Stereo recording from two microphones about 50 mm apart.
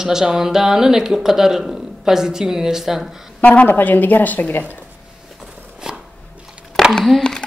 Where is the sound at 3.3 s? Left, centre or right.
Left.